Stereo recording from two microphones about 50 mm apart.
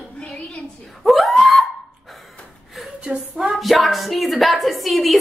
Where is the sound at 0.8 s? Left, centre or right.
Centre.